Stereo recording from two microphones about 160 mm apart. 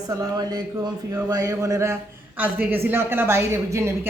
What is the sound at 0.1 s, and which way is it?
A woman's voice, 25° right (ahead or behind).